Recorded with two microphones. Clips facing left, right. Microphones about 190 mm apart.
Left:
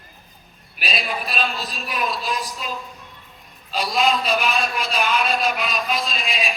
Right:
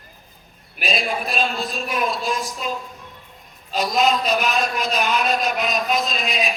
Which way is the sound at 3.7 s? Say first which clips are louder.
Right 2 dB; 45° right (ahead or behind).